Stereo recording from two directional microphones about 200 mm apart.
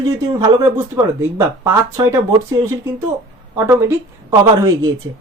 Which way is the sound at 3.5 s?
15° right (ahead or behind).